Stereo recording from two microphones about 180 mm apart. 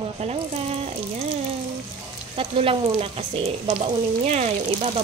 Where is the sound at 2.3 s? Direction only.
30° right (ahead or behind).